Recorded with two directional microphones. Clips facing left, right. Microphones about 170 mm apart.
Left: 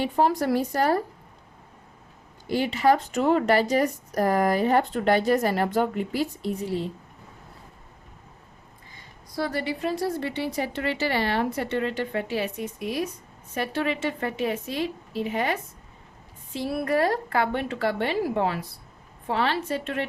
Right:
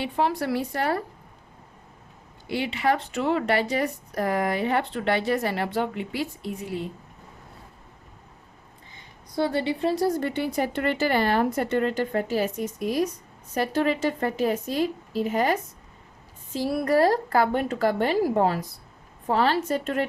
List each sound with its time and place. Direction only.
0.0 s speech: 40° left (ahead or behind)
2.5 s speech: 40° left (ahead or behind)
9.3 s a woman's voice: 25° right (ahead or behind); by 15.5 s 40° right (ahead or behind)
16.6 s a woman's voice: 35° right (ahead or behind)